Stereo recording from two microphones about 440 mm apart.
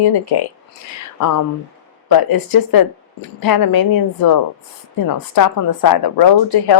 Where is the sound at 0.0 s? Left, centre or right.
Left.